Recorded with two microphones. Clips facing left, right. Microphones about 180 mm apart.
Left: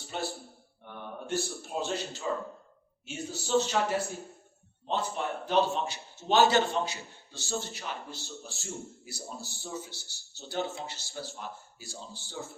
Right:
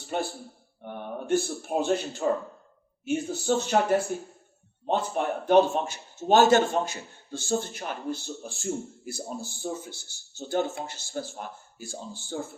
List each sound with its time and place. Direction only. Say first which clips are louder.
0.1 s speech: right 5 dB; 50° right (ahead or behind)